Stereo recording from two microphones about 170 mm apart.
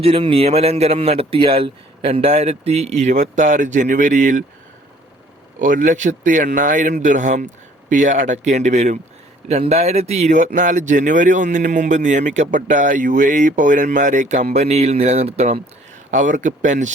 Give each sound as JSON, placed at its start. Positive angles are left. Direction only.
{"t": 0.0, "sound": "speech", "side_deg": -35}
{"t": 5.5, "sound": "speech", "side_deg": -50}
{"t": 16.1, "sound": "speech", "side_deg": -50}